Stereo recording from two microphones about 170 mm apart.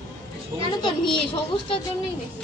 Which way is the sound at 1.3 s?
30° left (ahead or behind).